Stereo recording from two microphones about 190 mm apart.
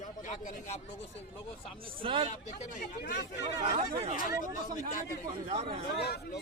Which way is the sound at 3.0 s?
60° left (ahead or behind).